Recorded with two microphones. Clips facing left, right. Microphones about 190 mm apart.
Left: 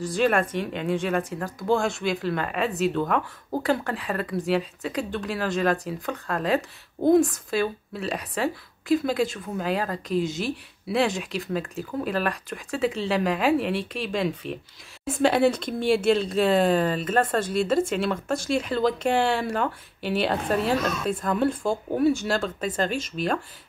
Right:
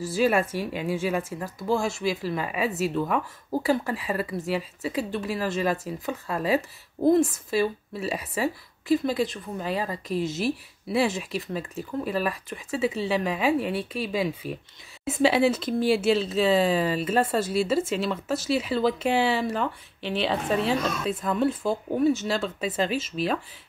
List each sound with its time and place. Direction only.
0.0 s speech: 5° right (ahead or behind)